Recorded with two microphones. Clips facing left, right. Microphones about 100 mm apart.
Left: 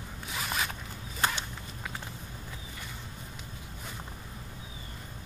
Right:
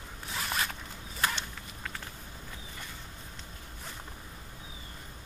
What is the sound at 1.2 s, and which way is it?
Whip, 25° left (ahead or behind).